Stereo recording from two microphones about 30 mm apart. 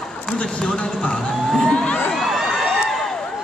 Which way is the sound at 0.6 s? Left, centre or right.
Left.